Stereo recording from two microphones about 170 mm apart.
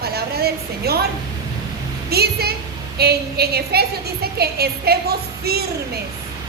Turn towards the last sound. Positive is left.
turn(degrees=-65)  # may be behind; listen again after turning